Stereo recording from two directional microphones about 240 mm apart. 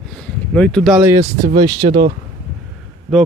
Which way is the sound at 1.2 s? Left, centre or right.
Right.